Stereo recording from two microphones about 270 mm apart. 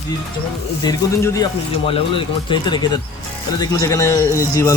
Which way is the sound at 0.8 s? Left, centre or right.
Centre.